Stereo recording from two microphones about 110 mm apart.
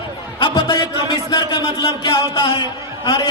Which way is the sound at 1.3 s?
40° left (ahead or behind).